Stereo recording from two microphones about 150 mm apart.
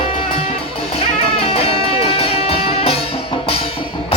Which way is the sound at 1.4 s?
40° left (ahead or behind).